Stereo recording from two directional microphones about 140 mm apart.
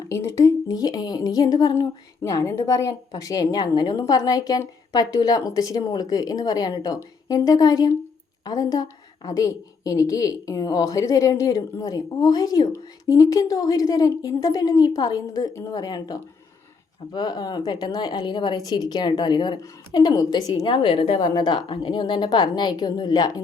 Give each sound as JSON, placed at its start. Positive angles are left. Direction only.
{"t": 0.1, "sound": "speech", "side_deg": 20}
{"t": 21.2, "sound": "speech", "side_deg": 30}